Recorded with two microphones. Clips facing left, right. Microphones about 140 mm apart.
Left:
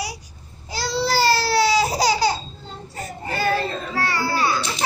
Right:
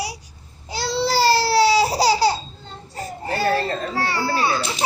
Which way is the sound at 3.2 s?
30° right (ahead or behind).